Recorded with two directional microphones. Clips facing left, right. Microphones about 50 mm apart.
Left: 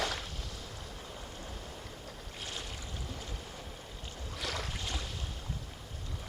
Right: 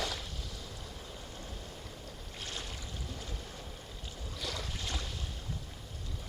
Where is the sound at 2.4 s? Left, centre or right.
Centre.